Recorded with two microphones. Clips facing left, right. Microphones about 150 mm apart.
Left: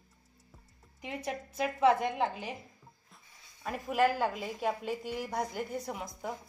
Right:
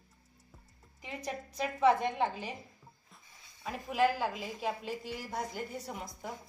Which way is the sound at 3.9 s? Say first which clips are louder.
Left 1 dB; 50° left (ahead or behind).